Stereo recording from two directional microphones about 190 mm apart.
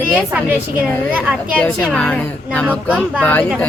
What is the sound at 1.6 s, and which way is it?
Speech, 5° left (ahead or behind).